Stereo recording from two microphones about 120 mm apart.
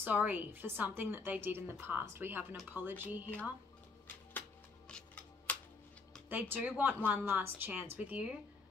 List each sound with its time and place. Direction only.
0.0 s a woman's voice: 15° right (ahead or behind)
4.8 s scissors: 10° left (ahead or behind)
6.2 s a woman's voice: 15° right (ahead or behind)